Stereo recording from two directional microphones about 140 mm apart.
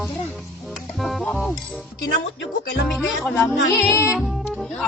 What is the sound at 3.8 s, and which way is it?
Music, 20° left (ahead or behind).